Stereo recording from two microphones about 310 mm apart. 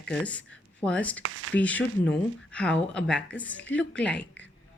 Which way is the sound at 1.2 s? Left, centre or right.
Right.